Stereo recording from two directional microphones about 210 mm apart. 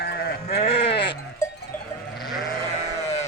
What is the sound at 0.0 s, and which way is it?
Sheep, 45° left (ahead or behind).